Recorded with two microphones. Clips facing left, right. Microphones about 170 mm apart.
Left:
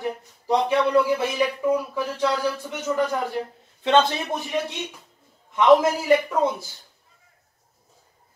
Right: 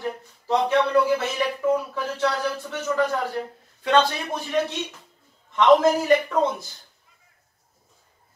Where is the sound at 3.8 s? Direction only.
20° left (ahead or behind).